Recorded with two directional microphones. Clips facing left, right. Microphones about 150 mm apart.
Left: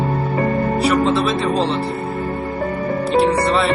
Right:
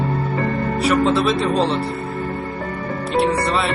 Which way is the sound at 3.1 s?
Centre (ahead or behind).